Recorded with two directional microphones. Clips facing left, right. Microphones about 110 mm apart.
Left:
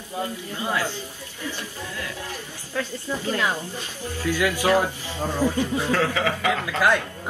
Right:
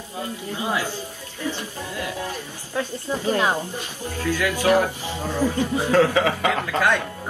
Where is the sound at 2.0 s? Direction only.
15° right (ahead or behind).